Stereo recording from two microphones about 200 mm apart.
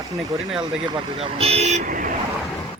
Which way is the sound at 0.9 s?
30° right (ahead or behind).